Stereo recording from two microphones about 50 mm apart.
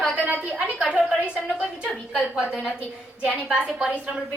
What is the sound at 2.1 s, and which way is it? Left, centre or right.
A woman's voice, centre.